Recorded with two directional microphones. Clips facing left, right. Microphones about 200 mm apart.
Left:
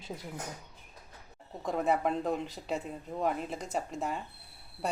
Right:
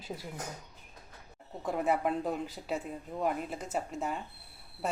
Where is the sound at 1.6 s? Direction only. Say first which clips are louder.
Left 1 dB; 5° right (ahead or behind).